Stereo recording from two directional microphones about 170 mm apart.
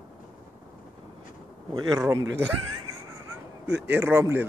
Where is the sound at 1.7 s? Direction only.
20° right (ahead or behind).